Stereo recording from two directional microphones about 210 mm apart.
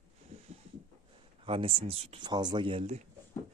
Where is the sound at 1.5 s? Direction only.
25° right (ahead or behind).